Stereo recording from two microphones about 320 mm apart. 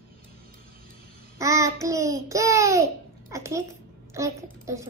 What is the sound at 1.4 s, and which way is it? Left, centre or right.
Babbling, centre.